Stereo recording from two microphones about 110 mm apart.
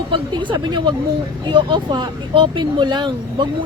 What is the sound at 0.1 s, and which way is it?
Speech, 45° right (ahead or behind).